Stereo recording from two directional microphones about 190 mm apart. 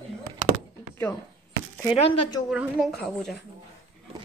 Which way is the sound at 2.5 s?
5° right (ahead or behind).